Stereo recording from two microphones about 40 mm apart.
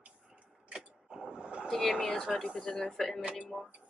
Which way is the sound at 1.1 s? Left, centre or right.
Centre.